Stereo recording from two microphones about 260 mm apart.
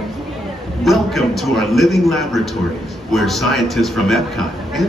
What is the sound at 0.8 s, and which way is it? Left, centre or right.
A man's voice, centre.